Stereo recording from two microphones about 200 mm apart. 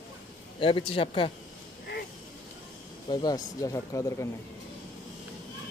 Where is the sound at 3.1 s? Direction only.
20° left (ahead or behind).